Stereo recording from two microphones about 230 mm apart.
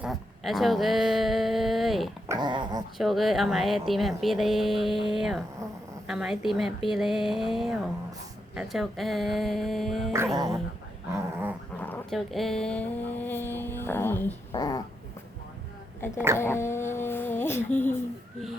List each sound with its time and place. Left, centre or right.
0.0 s speech: centre
2.2 s speech: centre
3.0 s speech: centre
10.3 s dog: centre
11.8 s speech: centre
16.4 s speech: centre